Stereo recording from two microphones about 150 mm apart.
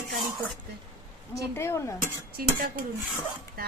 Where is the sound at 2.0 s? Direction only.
75° right (ahead or behind).